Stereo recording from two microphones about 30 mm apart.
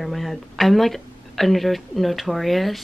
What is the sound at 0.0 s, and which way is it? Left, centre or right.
Speech, centre.